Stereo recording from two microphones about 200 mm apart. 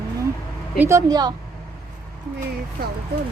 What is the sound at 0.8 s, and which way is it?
Speech, 15° right (ahead or behind).